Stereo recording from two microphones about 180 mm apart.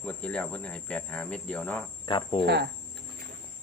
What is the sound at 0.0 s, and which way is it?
Speech, 5° left (ahead or behind).